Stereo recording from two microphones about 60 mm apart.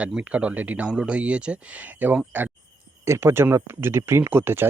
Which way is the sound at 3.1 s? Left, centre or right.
Right.